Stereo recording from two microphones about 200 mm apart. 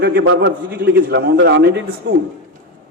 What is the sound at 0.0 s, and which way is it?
Speech, 50° right (ahead or behind).